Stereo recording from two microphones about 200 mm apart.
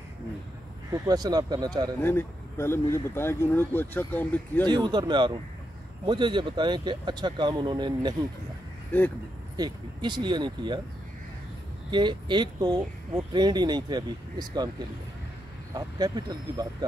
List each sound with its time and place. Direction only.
0.9 s speech: 20° right (ahead or behind)
2.0 s speech: 10° left (ahead or behind)
4.6 s speech: 20° right (ahead or behind)
8.9 s speech: 10° left (ahead or behind)
9.6 s speech: 20° right (ahead or behind)
11.9 s speech: 20° right (ahead or behind)
15.7 s speech: 20° right (ahead or behind)